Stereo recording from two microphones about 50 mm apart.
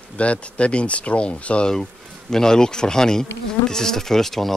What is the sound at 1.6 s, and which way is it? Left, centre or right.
Bee, centre.